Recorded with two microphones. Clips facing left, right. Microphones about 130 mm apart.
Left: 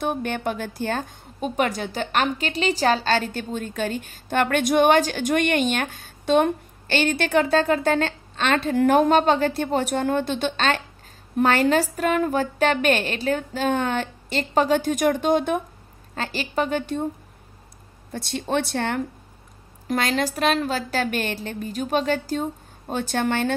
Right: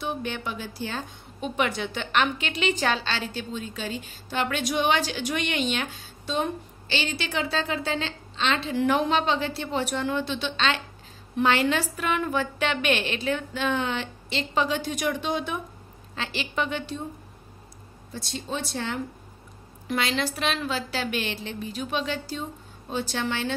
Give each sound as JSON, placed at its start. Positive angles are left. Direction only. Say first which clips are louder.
{"t": 0.0, "sound": "a woman's voice", "louder": "left 6 dB", "side_deg": 50}
{"t": 18.1, "sound": "speech", "louder": "left 8 dB", "side_deg": 60}
{"t": 19.9, "sound": "a woman's voice", "louder": "left 4 dB", "side_deg": 45}